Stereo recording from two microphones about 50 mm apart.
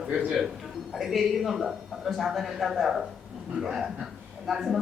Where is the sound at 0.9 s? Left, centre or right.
Centre.